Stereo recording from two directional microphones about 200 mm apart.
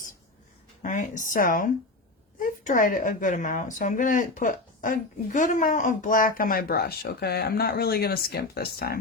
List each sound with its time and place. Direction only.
0.8 s speech: 40° left (ahead or behind)